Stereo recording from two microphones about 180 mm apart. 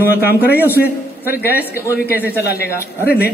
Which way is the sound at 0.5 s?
10° right (ahead or behind).